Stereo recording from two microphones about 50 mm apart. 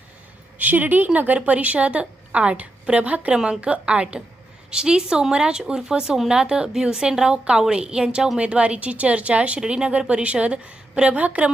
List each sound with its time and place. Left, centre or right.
0.6 s a woman's voice: right
3.3 s a woman's voice: centre